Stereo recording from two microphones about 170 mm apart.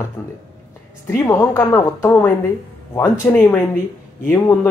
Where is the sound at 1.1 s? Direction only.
20° left (ahead or behind).